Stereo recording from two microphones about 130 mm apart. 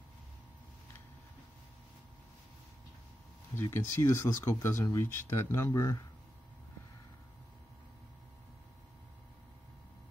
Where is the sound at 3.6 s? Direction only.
20° left (ahead or behind).